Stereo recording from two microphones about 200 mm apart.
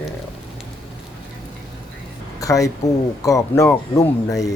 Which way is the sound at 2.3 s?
15° left (ahead or behind).